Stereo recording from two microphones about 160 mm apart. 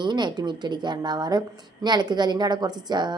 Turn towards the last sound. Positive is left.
turn(degrees=-25)  # may be behind; listen again after turning